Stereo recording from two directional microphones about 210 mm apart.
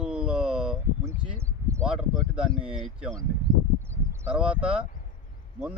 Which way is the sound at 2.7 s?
Centre (ahead or behind).